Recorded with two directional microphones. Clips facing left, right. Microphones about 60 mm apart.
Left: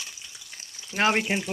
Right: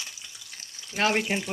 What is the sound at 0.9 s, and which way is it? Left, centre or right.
Speech, left.